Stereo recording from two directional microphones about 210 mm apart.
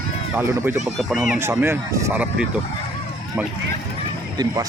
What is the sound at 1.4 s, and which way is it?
Speech, 10° right (ahead or behind).